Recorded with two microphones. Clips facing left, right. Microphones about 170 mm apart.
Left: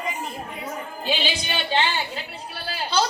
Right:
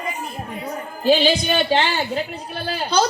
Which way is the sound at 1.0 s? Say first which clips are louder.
Right 11 dB; 40° right (ahead or behind).